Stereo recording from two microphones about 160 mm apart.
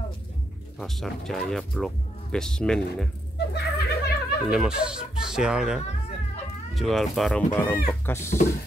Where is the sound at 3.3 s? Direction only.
90° left.